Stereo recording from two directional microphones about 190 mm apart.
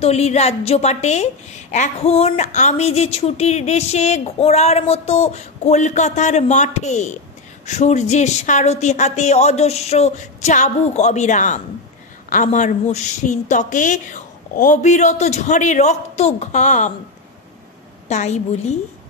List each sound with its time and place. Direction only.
0.0 s a woman's voice: 35° left (ahead or behind)
18.0 s a woman's voice: 35° left (ahead or behind)